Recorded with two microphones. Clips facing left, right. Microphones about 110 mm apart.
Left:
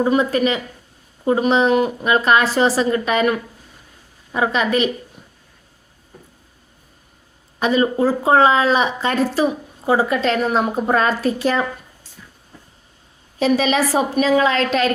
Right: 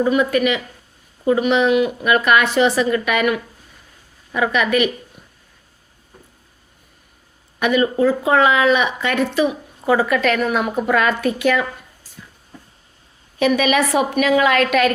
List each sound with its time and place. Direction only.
0.0 s a woman's voice: 30° left (ahead or behind)
7.6 s speech: 30° left (ahead or behind)
13.4 s a woman's voice: 30° left (ahead or behind)